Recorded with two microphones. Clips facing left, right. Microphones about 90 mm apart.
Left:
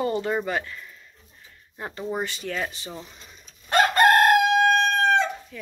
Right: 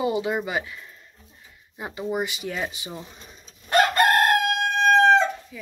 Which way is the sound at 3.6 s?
30° left (ahead or behind).